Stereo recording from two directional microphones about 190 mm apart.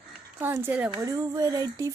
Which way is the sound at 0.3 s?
10° right (ahead or behind).